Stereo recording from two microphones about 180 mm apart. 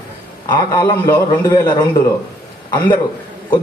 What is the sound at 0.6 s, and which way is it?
A man's voice, 20° left (ahead or behind).